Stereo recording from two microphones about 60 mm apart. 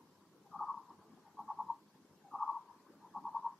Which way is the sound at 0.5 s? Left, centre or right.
Left.